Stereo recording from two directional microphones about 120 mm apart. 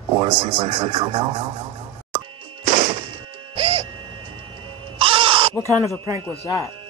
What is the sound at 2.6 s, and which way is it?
Music, 70° right (ahead or behind).